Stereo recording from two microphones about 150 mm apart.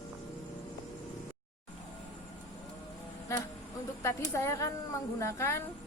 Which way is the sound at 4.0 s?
15° left (ahead or behind).